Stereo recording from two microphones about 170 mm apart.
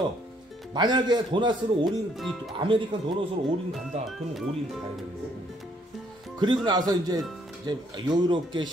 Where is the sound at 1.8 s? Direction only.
Centre (ahead or behind).